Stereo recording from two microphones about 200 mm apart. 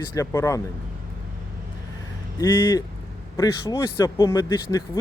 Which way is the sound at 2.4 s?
20° left (ahead or behind).